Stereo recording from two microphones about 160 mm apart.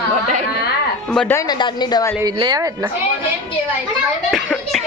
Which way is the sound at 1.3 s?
20° left (ahead or behind).